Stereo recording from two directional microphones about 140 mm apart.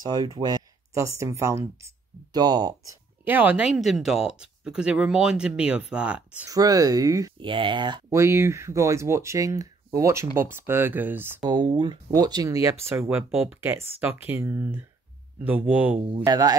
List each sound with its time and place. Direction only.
0.0 s speech: 30° right (ahead or behind)
3.3 s speech: 10° right (ahead or behind)
6.5 s speech: 25° right (ahead or behind)
7.3 s speech: 35° right (ahead or behind)
8.1 s speech: 20° right (ahead or behind)
11.4 s speech: 30° right (ahead or behind); by 16.0 s 10° right (ahead or behind)
16.3 s speech: 25° right (ahead or behind)